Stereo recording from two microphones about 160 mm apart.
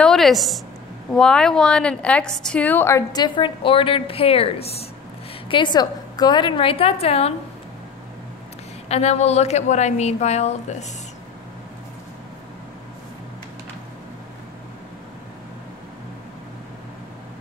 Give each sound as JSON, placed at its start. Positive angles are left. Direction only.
{"t": 0.0, "sound": "a woman's voice", "side_deg": 0}
{"t": 5.5, "sound": "a woman's voice", "side_deg": 30}
{"t": 8.8, "sound": "a woman's voice", "side_deg": 40}